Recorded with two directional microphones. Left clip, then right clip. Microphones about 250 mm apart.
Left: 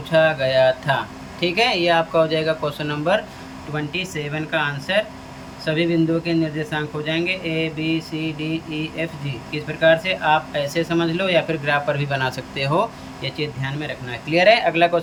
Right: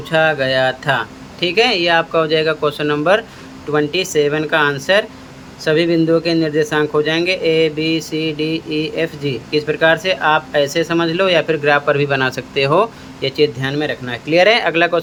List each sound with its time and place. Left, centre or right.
0.1 s a man's voice: centre